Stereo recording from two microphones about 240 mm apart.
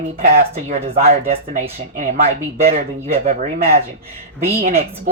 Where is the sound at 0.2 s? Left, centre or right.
Right.